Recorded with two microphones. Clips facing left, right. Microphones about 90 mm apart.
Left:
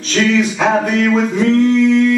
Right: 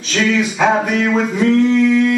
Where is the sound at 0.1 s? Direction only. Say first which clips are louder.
Left 2 dB; 10° right (ahead or behind).